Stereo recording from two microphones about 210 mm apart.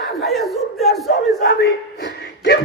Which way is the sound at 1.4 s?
50° left (ahead or behind).